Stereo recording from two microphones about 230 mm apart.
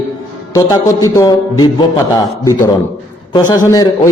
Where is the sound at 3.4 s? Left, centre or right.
Centre.